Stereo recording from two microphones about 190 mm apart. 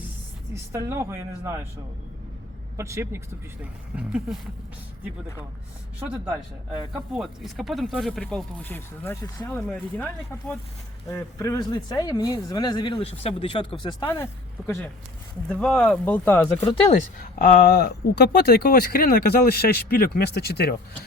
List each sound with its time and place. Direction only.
0.5 s speech: 15° right (ahead or behind)
2.7 s speech: 15° right (ahead or behind)
6.0 s speech: 10° right (ahead or behind); by 9.3 s 10° left (ahead or behind)
11.1 s speech: 15° left (ahead or behind)
15.4 s speech: 5° left (ahead or behind)
16.8 s speech: 40° left (ahead or behind); by 20.7 s 60° left (ahead or behind)